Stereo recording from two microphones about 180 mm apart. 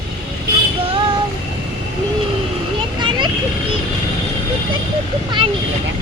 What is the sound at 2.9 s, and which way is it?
Vehicle, 25° right (ahead or behind).